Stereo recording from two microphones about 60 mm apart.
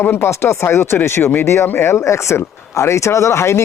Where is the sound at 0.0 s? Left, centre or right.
Left.